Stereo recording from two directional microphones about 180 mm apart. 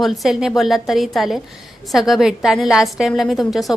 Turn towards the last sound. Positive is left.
turn(degrees=0)  # may be behind; listen again after turning